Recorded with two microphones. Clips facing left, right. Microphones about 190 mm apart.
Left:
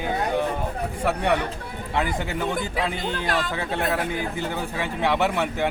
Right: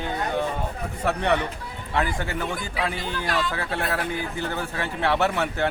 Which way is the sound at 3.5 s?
20° left (ahead or behind).